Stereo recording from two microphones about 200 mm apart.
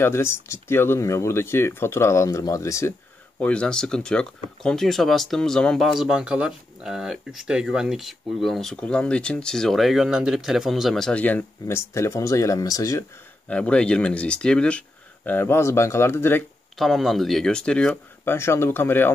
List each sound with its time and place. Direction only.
0.0 s speech: 15° left (ahead or behind)
3.3 s speech: 5° left (ahead or behind)
13.5 s speech: 5° left (ahead or behind)
16.7 s speech: centre (ahead or behind)